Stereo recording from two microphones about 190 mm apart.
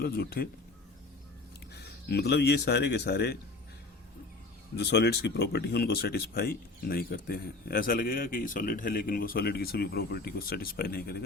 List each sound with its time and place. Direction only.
0.0 s speech: 55° left (ahead or behind)
1.7 s speech: 60° left (ahead or behind)
4.8 s speech: 60° left (ahead or behind)